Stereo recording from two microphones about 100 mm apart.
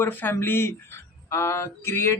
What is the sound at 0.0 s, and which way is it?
Speech, 20° left (ahead or behind).